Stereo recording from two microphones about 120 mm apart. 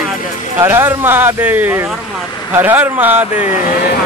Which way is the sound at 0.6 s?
20° right (ahead or behind).